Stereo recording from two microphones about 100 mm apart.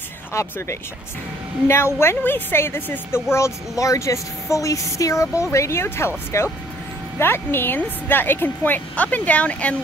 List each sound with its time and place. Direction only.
0.3 s a woman's voice: 30° left (ahead or behind); by 9.8 s 15° left (ahead or behind)